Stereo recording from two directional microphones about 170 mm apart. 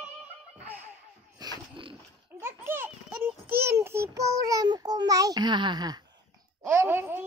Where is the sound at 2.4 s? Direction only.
15° right (ahead or behind).